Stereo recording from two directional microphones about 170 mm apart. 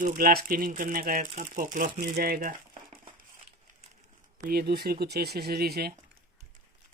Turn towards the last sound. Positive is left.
turn(degrees=-65)  # may be behind; listen again after turning